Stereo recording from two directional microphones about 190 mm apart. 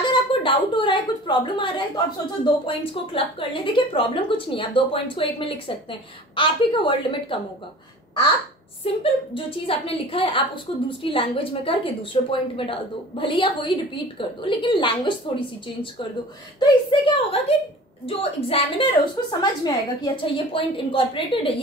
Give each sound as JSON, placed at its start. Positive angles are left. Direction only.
{"t": 0.0, "sound": "a woman's voice", "side_deg": 25}
{"t": 8.8, "sound": "a woman's voice", "side_deg": 30}